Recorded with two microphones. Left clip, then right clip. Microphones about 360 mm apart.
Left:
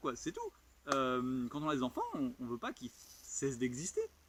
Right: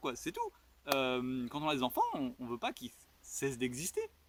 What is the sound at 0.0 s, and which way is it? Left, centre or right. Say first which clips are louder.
Speech: right 2 dB; centre.